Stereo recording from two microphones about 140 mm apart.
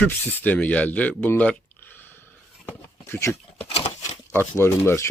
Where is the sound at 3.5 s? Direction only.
45° left (ahead or behind).